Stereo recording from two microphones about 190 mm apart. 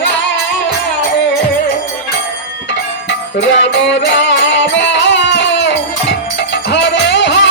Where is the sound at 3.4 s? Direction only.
70° left (ahead or behind).